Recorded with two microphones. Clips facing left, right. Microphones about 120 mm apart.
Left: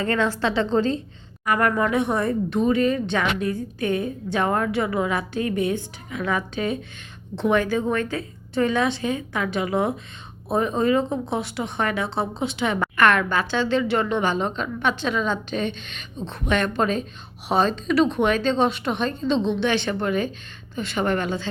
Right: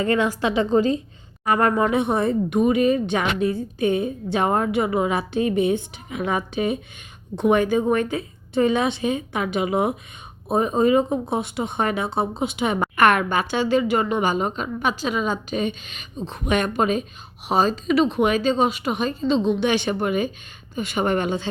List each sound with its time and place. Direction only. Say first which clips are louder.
0.0 s a woman's voice: right 2 dB; 15° right (ahead or behind)
1.5 s a woman's voice: right 2 dB; 25° right (ahead or behind); by 16.4 s 5° right (ahead or behind)
16.5 s a woman's voice: right 1 dB; 15° right (ahead or behind)